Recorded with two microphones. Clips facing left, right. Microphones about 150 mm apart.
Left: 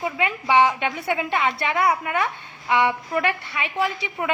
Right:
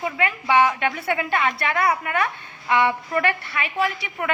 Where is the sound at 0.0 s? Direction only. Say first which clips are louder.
Even; 20° left (ahead or behind).